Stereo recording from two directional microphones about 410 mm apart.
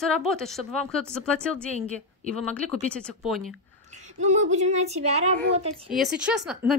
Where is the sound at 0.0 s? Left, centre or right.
Centre.